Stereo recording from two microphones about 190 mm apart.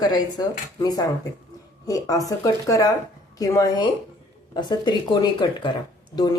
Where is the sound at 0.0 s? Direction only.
20° left (ahead or behind).